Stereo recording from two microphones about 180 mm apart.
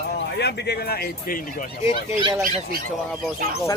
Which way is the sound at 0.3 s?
70° left (ahead or behind).